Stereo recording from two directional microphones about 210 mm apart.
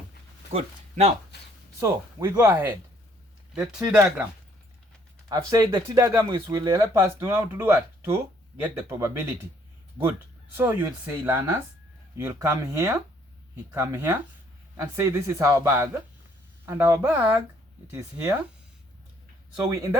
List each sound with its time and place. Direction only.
0.5 s speech: 30° right (ahead or behind)
1.8 s speech: 15° right (ahead or behind)
5.3 s speech: 15° right (ahead or behind)
10.6 s speech: 10° right (ahead or behind)
19.7 s speech: 15° right (ahead or behind)